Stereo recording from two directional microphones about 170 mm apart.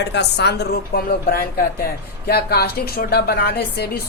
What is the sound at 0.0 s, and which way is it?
A woman's voice, 80° left.